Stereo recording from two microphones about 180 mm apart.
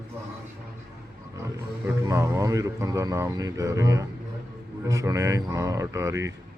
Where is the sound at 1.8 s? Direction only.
15° right (ahead or behind).